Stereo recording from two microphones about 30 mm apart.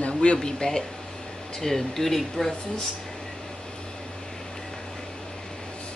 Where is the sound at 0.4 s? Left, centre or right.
Left.